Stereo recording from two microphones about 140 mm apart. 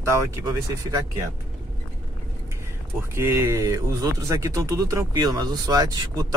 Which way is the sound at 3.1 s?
20° right (ahead or behind).